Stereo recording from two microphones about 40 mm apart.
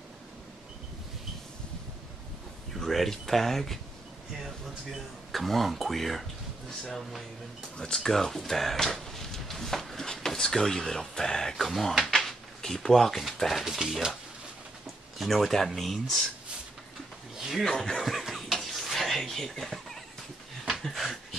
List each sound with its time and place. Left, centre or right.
2.7 s speech: centre
4.9 s speech: centre
8.7 s a sound: centre
11.5 s speech: centre
12.0 s drawer open or close: centre
13.3 s speech: centre
15.1 s speech: centre
17.4 s speech: centre
17.6 s speech: centre
18.0 s a sound: centre